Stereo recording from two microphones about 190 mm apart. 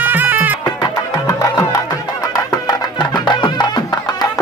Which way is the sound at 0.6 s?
20° left (ahead or behind).